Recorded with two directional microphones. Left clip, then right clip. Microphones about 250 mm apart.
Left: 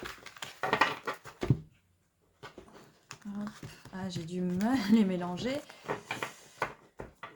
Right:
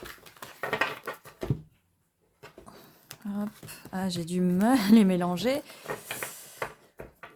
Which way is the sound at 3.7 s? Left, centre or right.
Right.